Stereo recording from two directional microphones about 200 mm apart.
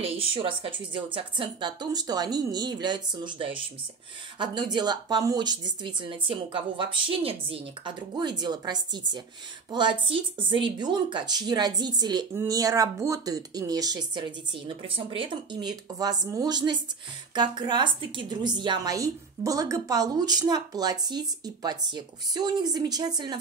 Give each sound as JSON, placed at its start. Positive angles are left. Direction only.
{"t": 0.3, "sound": "a woman's voice", "side_deg": -25}